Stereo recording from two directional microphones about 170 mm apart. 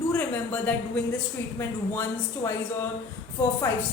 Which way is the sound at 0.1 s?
10° left (ahead or behind).